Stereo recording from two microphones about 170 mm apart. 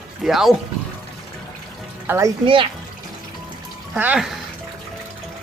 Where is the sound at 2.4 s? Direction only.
30° right (ahead or behind).